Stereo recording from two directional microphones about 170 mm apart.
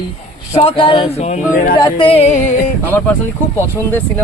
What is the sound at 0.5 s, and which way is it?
Speech, 35° left (ahead or behind).